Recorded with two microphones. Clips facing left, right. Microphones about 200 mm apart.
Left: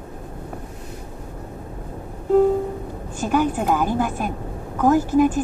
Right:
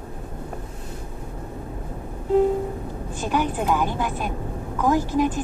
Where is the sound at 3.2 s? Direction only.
45° left (ahead or behind).